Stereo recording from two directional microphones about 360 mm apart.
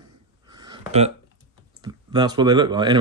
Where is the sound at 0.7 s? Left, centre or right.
Centre.